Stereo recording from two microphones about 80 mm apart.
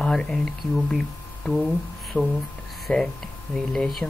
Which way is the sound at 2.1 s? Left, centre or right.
Centre.